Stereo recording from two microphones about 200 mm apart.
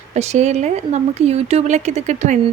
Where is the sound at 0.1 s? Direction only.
35° right (ahead or behind).